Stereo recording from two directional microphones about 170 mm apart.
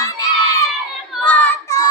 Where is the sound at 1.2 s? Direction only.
10° left (ahead or behind).